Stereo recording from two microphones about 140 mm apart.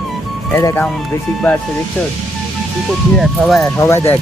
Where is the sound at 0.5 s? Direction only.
20° left (ahead or behind).